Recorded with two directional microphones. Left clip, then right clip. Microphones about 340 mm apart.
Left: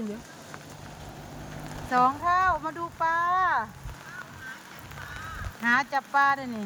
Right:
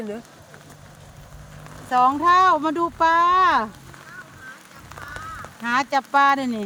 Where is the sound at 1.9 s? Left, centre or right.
Right.